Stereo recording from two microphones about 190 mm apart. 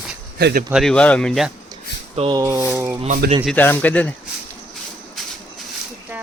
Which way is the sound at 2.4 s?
15° right (ahead or behind).